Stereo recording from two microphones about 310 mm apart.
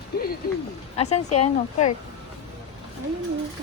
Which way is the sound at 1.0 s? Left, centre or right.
Left.